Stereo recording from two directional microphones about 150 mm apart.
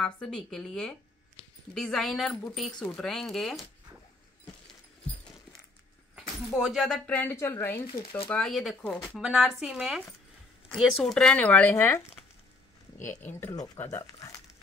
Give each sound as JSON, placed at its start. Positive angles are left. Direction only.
{"t": 0.0, "sound": "speech", "side_deg": 5}
{"t": 6.5, "sound": "speech", "side_deg": 0}
{"t": 8.3, "sound": "speech", "side_deg": 5}
{"t": 12.9, "sound": "speech", "side_deg": 55}
{"t": 13.2, "sound": "speech", "side_deg": 15}